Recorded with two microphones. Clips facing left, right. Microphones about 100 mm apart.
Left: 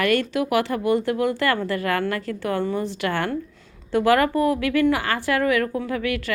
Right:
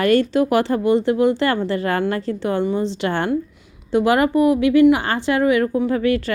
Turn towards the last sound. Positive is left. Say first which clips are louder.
# right 7 dB
turn(degrees=-30)  # may be behind; listen again after turning